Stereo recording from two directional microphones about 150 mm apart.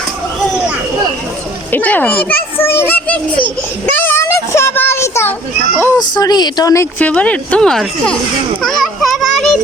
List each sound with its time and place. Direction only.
1.7 s a child's voice: 10° left (ahead or behind)
3.9 s a sound: 15° left (ahead or behind)
6.0 s speech: 25° left (ahead or behind)
7.0 s a child's voice: 10° left (ahead or behind)
8.6 s children playing: centre (ahead or behind)